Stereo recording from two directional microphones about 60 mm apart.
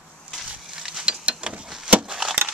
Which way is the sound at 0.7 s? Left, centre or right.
Centre.